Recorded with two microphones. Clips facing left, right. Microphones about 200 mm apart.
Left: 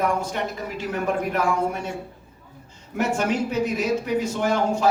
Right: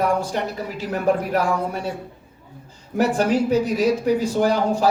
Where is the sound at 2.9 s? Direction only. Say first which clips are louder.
Right 4 dB; 35° right (ahead or behind).